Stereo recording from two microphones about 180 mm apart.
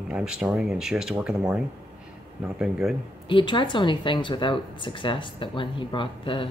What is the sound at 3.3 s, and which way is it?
Speech, 25° left (ahead or behind).